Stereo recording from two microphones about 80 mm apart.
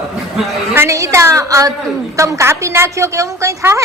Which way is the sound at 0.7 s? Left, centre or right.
Right.